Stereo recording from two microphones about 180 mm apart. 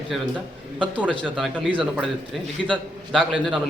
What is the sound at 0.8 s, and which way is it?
Speech, 10° right (ahead or behind).